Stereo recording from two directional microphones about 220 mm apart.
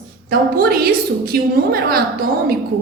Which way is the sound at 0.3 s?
45° right (ahead or behind).